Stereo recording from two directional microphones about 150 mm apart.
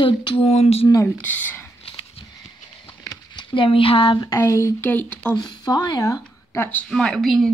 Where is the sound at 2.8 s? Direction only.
30° left (ahead or behind); by 5.3 s 10° left (ahead or behind).